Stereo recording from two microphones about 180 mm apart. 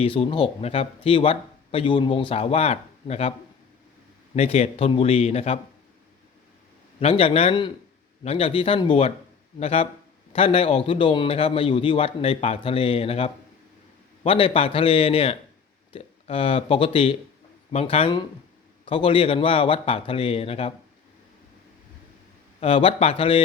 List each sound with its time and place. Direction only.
0.0 s speech: 30° left (ahead or behind)
4.4 s speech: 35° left (ahead or behind)
7.0 s speech: 35° left (ahead or behind)
22.6 s speech: 30° left (ahead or behind)